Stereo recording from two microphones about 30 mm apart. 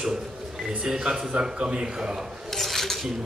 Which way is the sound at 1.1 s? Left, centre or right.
Right.